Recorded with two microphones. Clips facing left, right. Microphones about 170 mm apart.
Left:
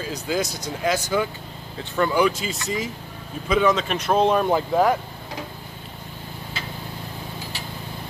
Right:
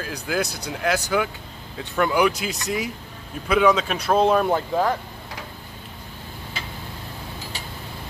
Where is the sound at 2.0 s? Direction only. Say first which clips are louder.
Even; 10° right (ahead or behind).